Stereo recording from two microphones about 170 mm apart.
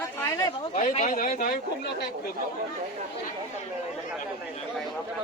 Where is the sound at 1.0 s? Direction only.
55° left (ahead or behind).